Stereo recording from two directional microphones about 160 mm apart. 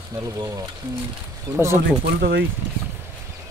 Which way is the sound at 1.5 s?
15° right (ahead or behind).